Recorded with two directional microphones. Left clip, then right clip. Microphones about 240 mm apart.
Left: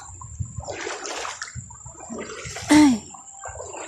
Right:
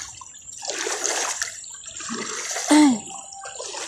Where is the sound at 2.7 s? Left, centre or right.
Centre.